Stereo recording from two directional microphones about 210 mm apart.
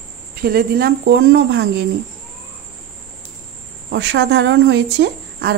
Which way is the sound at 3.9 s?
55° right (ahead or behind).